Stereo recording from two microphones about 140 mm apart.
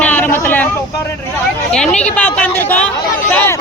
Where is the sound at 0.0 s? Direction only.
10° left (ahead or behind).